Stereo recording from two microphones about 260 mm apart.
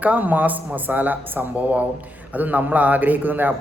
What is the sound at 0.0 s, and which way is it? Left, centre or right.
Speech, centre.